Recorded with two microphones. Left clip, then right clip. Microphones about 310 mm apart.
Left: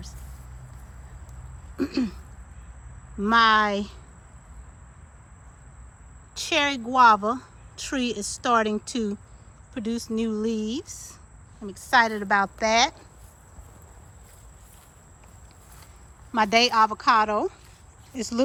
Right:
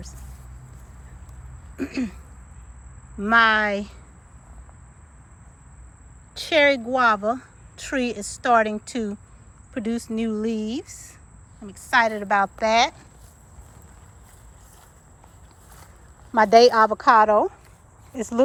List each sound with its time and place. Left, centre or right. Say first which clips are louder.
1.7 s speech: left 1 dB; centre
3.2 s speech: right 1 dB; centre
6.3 s speech: right 6 dB; centre
16.3 s speech: right 6 dB; centre